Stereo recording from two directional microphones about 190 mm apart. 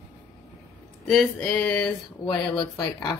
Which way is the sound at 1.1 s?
5° left (ahead or behind).